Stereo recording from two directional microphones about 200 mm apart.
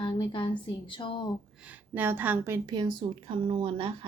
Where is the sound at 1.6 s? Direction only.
10° right (ahead or behind).